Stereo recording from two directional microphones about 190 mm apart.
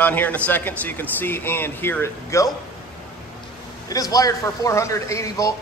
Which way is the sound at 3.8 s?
20° left (ahead or behind).